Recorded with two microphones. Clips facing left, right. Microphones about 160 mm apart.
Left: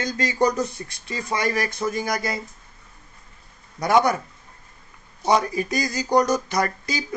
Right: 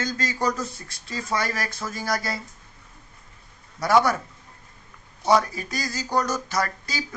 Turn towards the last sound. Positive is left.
turn(degrees=15)  # may be behind; listen again after turning